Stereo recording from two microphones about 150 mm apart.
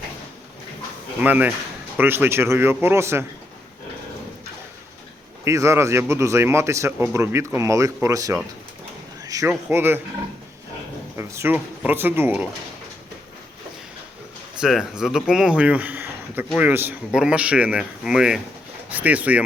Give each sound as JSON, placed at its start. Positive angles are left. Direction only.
{"t": 1.2, "sound": "a man's voice", "side_deg": -10}
{"t": 5.5, "sound": "a man's voice", "side_deg": -20}
{"t": 11.2, "sound": "a man's voice", "side_deg": -15}
{"t": 14.6, "sound": "a man's voice", "side_deg": -5}